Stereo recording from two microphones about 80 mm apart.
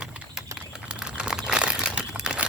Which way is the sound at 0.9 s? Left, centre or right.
Centre.